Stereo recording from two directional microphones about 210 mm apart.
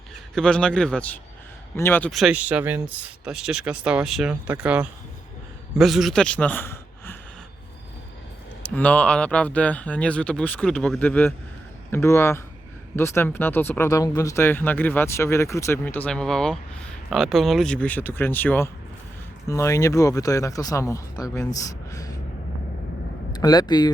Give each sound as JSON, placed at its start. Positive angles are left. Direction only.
{"t": 0.3, "sound": "a man's voice", "side_deg": 5}
{"t": 8.6, "sound": "speech", "side_deg": 5}
{"t": 23.3, "sound": "speech", "side_deg": 20}